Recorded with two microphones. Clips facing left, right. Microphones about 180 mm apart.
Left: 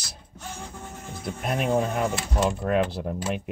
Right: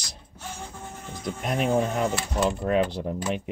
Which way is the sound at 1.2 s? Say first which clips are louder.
Right 1 dB; 5° left (ahead or behind).